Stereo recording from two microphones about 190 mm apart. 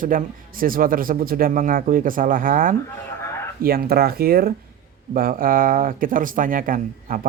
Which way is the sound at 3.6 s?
50° right (ahead or behind).